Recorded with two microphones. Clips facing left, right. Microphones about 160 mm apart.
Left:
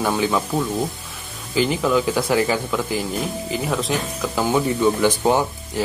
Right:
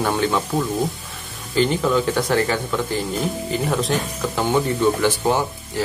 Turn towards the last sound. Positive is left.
turn(degrees=15)  # may be behind; listen again after turning